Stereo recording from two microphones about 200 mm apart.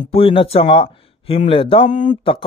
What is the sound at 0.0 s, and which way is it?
Speech, 30° left (ahead or behind).